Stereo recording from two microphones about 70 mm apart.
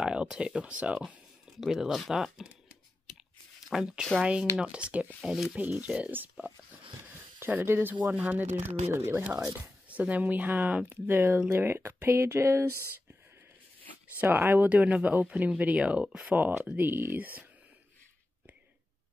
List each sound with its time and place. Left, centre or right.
0.0 s a sound: centre
0.6 s speech: centre
1.6 s speech: centre
3.7 s speech: centre
5.3 s speech: centre
5.6 s speech: centre
7.0 s speech: right
8.9 s speech: right
9.8 s speech: right
14.2 s speech: right; by 16.3 s centre
16.3 s speech: right